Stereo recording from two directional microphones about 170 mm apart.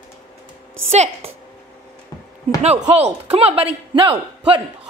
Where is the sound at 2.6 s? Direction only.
40° right (ahead or behind).